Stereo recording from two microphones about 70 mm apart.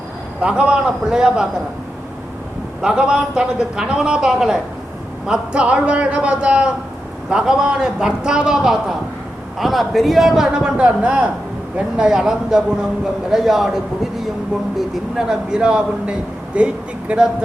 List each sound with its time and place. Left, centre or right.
0.4 s a man's voice: centre
2.8 s a man's voice: centre
11.9 s a man's voice: centre